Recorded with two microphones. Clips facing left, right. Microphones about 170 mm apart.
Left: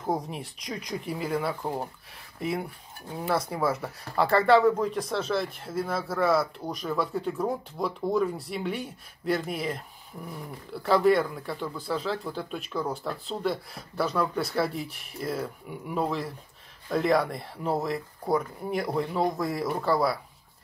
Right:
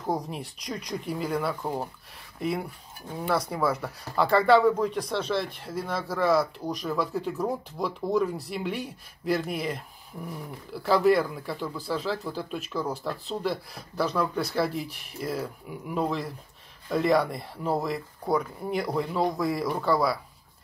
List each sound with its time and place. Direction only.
0.0 s speech: centre (ahead or behind)
3.1 s speech: 5° left (ahead or behind)